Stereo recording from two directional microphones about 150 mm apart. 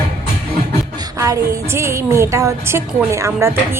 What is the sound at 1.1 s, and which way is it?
A woman's voice, 20° right (ahead or behind).